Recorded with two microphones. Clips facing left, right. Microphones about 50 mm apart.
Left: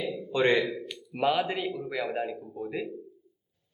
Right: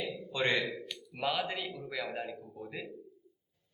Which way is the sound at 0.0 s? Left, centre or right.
Centre.